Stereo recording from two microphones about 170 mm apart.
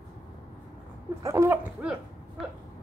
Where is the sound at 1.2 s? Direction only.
15° right (ahead or behind).